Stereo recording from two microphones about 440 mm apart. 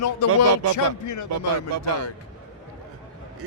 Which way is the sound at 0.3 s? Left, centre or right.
Right.